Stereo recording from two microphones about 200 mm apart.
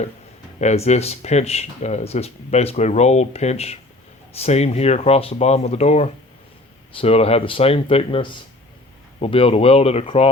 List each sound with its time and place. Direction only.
0.6 s speech: 35° left (ahead or behind)